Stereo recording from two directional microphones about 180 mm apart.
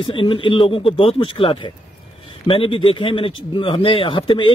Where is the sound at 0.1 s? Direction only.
30° left (ahead or behind).